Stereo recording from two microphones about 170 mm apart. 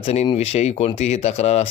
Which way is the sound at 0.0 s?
35° left (ahead or behind).